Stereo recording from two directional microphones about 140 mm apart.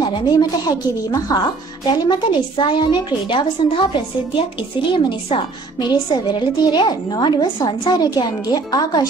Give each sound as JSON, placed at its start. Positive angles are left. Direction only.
{"t": 0.3, "sound": "a woman's voice", "side_deg": 30}
{"t": 4.9, "sound": "a woman's voice", "side_deg": 35}